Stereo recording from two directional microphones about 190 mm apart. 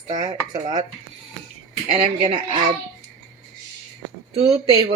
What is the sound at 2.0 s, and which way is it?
Speech, 30° right (ahead or behind).